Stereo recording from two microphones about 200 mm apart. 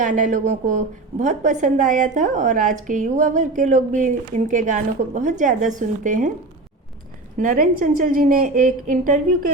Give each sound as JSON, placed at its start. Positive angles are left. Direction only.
{"t": 0.0, "sound": "a woman's voice", "side_deg": -40}
{"t": 7.3, "sound": "a woman's voice", "side_deg": -40}